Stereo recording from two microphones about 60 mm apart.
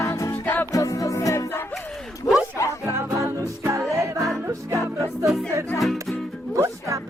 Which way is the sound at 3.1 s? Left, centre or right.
Right.